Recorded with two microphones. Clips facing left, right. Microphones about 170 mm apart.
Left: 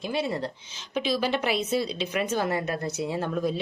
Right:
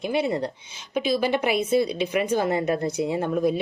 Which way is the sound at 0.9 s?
50° right (ahead or behind).